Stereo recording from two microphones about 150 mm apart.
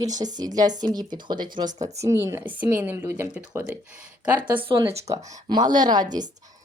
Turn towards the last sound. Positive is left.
turn(degrees=-30)  # may be behind; listen again after turning